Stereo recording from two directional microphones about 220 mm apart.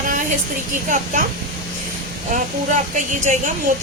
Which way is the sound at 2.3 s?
35° right (ahead or behind).